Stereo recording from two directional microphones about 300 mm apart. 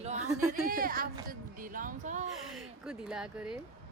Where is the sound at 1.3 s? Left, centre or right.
Right.